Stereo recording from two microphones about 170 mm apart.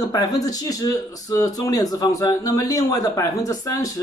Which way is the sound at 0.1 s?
20° left (ahead or behind).